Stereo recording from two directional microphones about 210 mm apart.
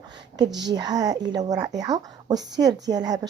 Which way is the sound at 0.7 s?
20° right (ahead or behind).